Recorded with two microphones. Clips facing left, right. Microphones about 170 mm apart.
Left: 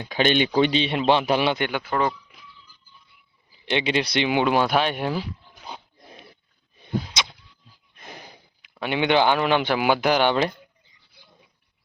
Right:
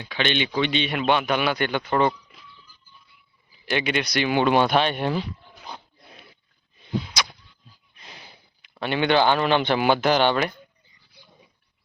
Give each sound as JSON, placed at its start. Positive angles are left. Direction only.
{"t": 0.1, "sound": "speech", "side_deg": 45}
{"t": 1.5, "sound": "speech", "side_deg": 15}
{"t": 1.8, "sound": "speech", "side_deg": 5}
{"t": 3.7, "sound": "speech", "side_deg": 25}
{"t": 4.3, "sound": "speech", "side_deg": 15}
{"t": 6.8, "sound": "whip", "side_deg": 20}
{"t": 7.9, "sound": "a sound", "side_deg": 50}
{"t": 8.8, "sound": "speech", "side_deg": 15}